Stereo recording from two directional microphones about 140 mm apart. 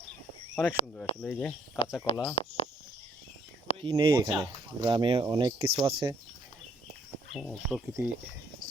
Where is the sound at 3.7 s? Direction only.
45° left (ahead or behind).